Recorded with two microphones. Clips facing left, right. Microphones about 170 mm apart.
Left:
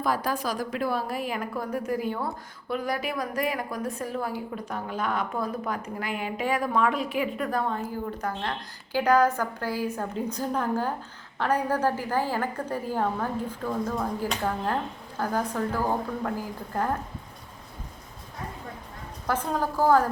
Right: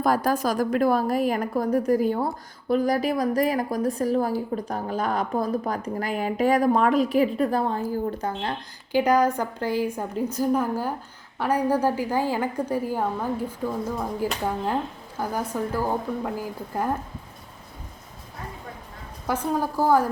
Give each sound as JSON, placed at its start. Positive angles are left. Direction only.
{"t": 0.0, "sound": "a woman's voice", "side_deg": -45}
{"t": 19.3, "sound": "a woman's voice", "side_deg": -10}